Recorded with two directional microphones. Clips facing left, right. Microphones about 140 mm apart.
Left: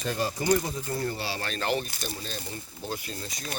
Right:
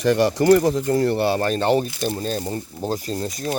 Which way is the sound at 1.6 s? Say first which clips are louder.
Right 7 dB; 30° right (ahead or behind).